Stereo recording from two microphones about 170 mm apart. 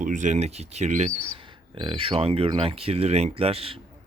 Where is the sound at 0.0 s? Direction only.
50° right (ahead or behind).